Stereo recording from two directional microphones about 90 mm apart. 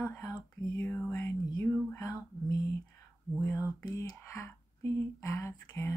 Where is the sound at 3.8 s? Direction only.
45° left (ahead or behind).